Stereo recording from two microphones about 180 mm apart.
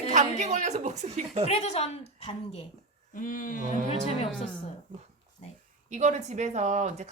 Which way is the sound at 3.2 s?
45° left (ahead or behind).